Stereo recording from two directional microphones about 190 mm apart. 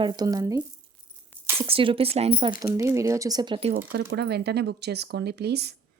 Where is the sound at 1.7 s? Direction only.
30° right (ahead or behind).